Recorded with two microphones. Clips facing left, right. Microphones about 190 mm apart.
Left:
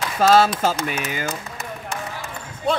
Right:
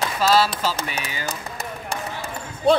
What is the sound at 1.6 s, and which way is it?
Basketball bounce, 35° right (ahead or behind).